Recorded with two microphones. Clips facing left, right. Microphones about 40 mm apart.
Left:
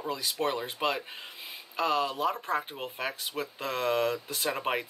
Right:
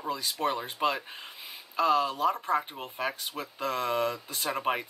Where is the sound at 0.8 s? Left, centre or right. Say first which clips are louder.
Right 2 dB; centre.